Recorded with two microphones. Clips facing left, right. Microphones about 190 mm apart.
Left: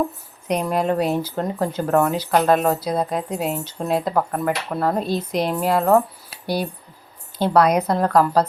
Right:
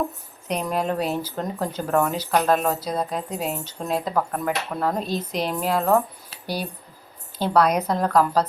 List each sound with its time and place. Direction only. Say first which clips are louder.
0.4 s speech: left 4 dB; 10° left (ahead or behind)